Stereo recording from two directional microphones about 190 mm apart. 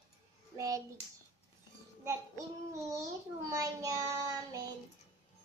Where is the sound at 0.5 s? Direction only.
15° right (ahead or behind).